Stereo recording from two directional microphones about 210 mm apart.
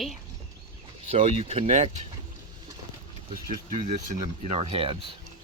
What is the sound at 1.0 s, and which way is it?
Speech, 30° right (ahead or behind).